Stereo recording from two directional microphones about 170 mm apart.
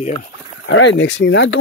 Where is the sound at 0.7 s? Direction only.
90° left.